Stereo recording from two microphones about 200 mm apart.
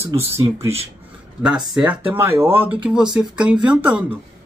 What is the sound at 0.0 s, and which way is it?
Speech, 15° right (ahead or behind).